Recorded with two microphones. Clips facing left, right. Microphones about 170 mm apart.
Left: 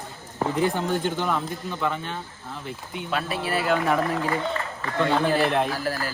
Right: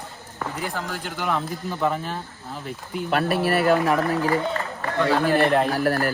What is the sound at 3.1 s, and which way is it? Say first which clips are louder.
Speech: right 6 dB; 60° right (ahead or behind).